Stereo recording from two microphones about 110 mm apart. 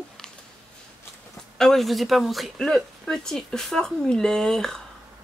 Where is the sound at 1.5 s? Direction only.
5° left (ahead or behind).